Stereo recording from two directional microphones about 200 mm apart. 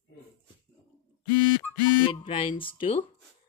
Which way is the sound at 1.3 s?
20° right (ahead or behind).